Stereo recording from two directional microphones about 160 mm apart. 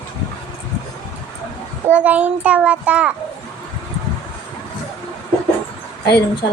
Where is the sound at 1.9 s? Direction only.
10° right (ahead or behind).